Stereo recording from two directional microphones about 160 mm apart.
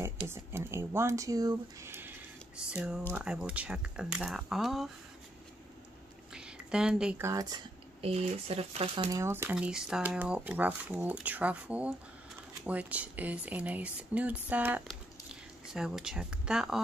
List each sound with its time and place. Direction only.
0.3 s speech: 15° right (ahead or behind)
6.3 s a sound: 5° right (ahead or behind)
7.2 s speech: 25° right (ahead or behind)
8.0 s speech: 40° right (ahead or behind)
9.1 s speech: 15° right (ahead or behind)